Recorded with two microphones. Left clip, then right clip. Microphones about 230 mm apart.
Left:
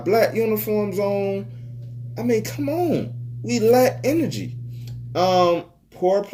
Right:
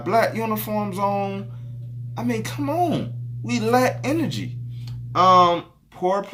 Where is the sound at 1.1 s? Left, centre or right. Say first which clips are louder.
Left 2 dB; right.